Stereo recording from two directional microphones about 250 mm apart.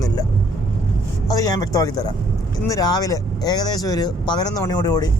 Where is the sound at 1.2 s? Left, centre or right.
Centre.